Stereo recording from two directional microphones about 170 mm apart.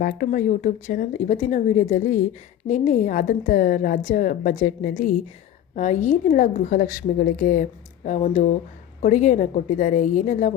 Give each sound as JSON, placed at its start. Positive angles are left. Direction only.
{"t": 0.0, "sound": "a woman's voice", "side_deg": 50}
{"t": 5.7, "sound": "a woman's voice", "side_deg": 45}